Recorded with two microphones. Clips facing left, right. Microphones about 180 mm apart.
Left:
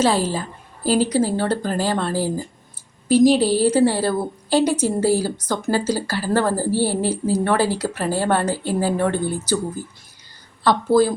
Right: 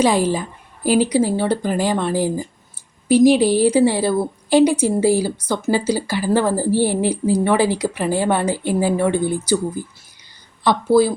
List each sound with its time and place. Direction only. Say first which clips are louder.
0.0 s a woman's voice: right 3 dB; 15° right (ahead or behind)